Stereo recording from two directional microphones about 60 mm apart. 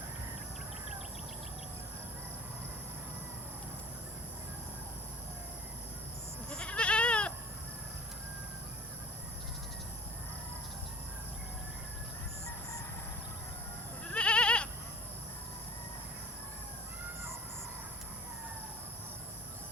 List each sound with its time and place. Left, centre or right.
6.5 s goat: centre
14.1 s goat: centre